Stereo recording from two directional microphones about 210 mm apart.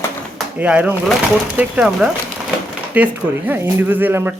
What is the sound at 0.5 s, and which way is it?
Speech, 5° right (ahead or behind).